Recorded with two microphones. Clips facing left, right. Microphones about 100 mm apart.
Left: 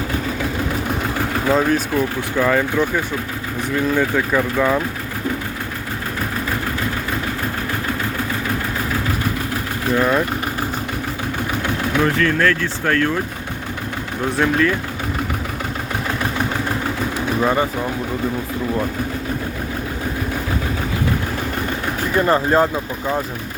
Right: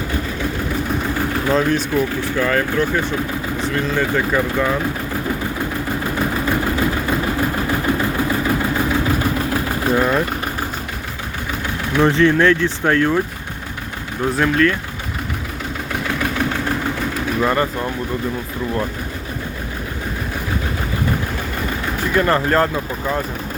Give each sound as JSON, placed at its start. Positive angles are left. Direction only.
{"t": 1.5, "sound": "speech", "side_deg": 10}
{"t": 10.0, "sound": "speech", "side_deg": 0}
{"t": 12.0, "sound": "speech", "side_deg": -25}
{"t": 14.3, "sound": "speech", "side_deg": 5}
{"t": 17.4, "sound": "speech", "side_deg": 10}
{"t": 22.1, "sound": "speech", "side_deg": 20}